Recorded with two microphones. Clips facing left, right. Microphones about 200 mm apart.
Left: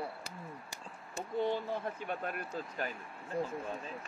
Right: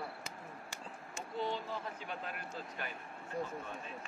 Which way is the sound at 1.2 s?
55° left (ahead or behind).